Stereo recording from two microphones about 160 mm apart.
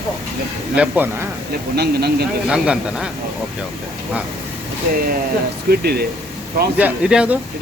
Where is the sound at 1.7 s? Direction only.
90° right.